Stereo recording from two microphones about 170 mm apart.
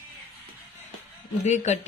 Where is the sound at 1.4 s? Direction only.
45° left (ahead or behind).